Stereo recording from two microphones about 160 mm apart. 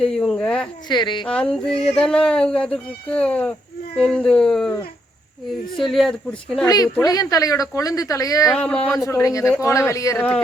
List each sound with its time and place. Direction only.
0.0 s a woman's voice: 5° left (ahead or behind)
0.9 s speech: 30° left (ahead or behind)
1.3 s speech: 5° left (ahead or behind)
5.8 s speech: centre (ahead or behind)
6.7 s speech: 25° left (ahead or behind)
8.5 s speech: 5° left (ahead or behind)